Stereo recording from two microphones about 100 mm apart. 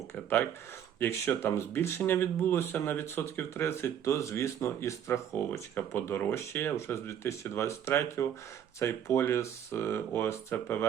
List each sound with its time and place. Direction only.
0.9 s speech: 25° left (ahead or behind)